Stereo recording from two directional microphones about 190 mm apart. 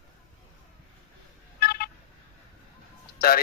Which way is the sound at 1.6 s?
55° left (ahead or behind).